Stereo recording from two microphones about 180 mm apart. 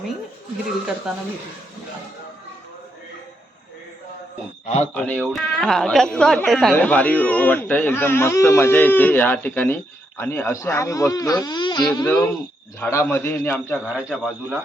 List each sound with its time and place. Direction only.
1.1 s speech: 5° right (ahead or behind)
4.6 s a man's voice: 40° left (ahead or behind)
4.9 s a woman's voice: 10° left (ahead or behind)
14.1 s speech: centre (ahead or behind)